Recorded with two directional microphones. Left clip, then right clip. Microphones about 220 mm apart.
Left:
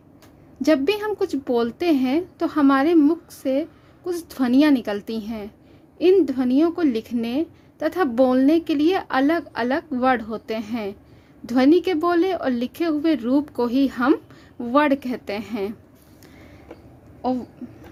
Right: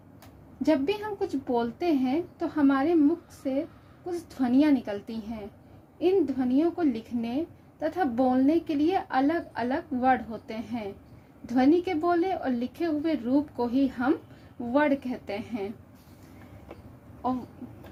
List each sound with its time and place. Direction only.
0.6 s a woman's voice: 40° left (ahead or behind)